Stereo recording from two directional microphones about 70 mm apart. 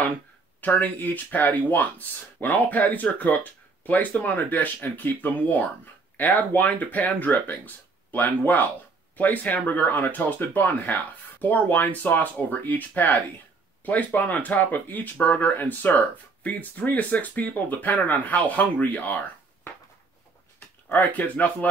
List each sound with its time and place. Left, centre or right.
0.6 s speech: left